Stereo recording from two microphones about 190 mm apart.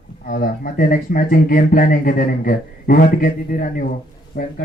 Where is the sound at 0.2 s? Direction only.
45° left (ahead or behind).